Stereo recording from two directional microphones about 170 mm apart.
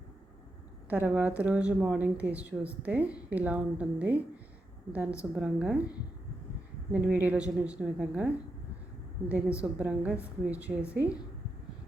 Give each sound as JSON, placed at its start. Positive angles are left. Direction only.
{"t": 0.9, "sound": "a woman's voice", "side_deg": -10}
{"t": 9.3, "sound": "a woman's voice", "side_deg": -5}